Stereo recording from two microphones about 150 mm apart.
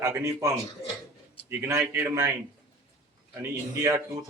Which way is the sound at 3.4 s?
20° right (ahead or behind).